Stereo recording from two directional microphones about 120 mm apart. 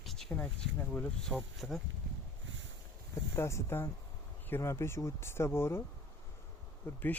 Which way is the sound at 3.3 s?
25° left (ahead or behind).